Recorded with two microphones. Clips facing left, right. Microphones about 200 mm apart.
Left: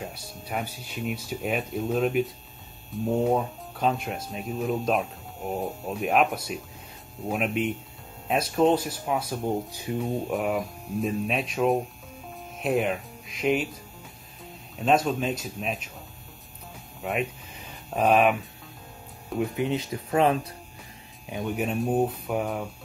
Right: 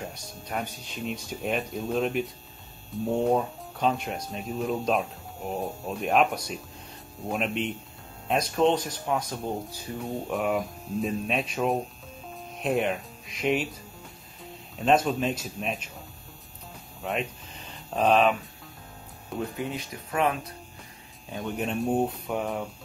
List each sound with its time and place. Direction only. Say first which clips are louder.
0.1 s speech: left 1 dB; 5° left (ahead or behind)
17.0 s a sound: left 2 dB; 5° left (ahead or behind)
19.5 s speech: left 6 dB; 20° left (ahead or behind)
21.4 s speech: left 2 dB; 5° left (ahead or behind)